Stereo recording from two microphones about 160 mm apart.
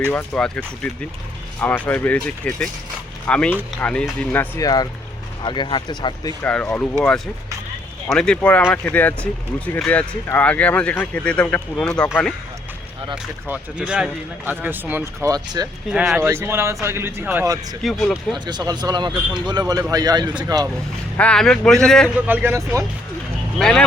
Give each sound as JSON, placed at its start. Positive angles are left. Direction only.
{"t": 0.1, "sound": "speech", "side_deg": 10}
{"t": 4.6, "sound": "speech", "side_deg": 25}
{"t": 6.4, "sound": "speech", "side_deg": 5}
{"t": 8.1, "sound": "speech", "side_deg": 5}
{"t": 13.5, "sound": "speech", "side_deg": -10}
{"t": 15.9, "sound": "speech", "side_deg": -5}
{"t": 17.8, "sound": "a man's voice", "side_deg": 0}
{"t": 18.3, "sound": "a man's voice", "side_deg": -25}
{"t": 21.2, "sound": "a man's voice", "side_deg": 5}
{"t": 22.3, "sound": "speech", "side_deg": -10}
{"t": 23.6, "sound": "a man's voice", "side_deg": 5}